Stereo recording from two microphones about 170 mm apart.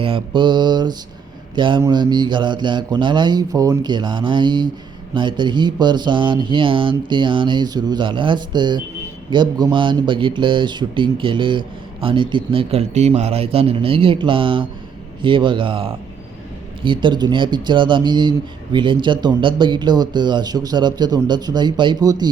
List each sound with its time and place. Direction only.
0.0 s a man's voice: 30° right (ahead or behind)